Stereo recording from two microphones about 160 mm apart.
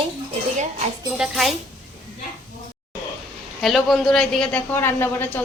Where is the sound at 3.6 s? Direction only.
Centre (ahead or behind).